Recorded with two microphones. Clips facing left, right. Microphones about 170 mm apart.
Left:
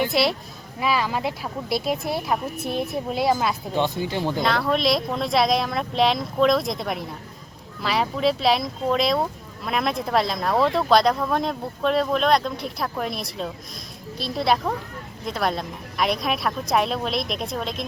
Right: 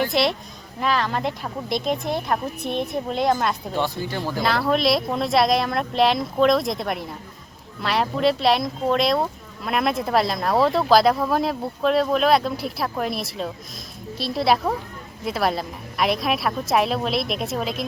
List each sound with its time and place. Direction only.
0.1 s speech: centre (ahead or behind)
3.8 s speech: 20° left (ahead or behind)
4.4 s speech: centre (ahead or behind)